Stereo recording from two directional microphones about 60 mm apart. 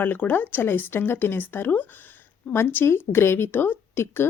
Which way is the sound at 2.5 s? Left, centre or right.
Left.